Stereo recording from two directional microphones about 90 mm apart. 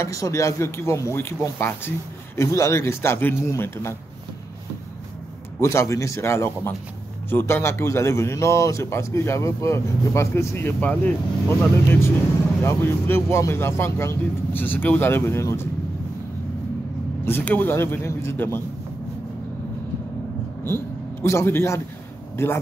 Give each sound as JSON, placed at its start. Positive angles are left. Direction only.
{"t": 0.0, "sound": "a man's voice", "side_deg": 35}
{"t": 5.6, "sound": "a man's voice", "side_deg": 30}
{"t": 10.8, "sound": "a man's voice", "side_deg": 15}
{"t": 17.2, "sound": "a man's voice", "side_deg": 20}
{"t": 20.6, "sound": "a man's voice", "side_deg": 25}